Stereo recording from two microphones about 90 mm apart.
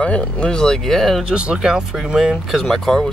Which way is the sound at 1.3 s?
10° right (ahead or behind).